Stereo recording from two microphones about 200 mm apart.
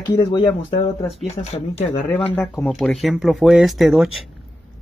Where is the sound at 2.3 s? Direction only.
10° left (ahead or behind).